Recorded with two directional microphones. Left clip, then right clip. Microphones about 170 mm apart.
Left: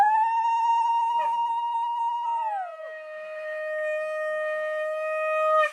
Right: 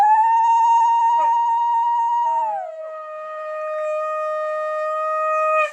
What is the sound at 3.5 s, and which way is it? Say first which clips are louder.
Shofar: right 4 dB; 65° left (ahead or behind).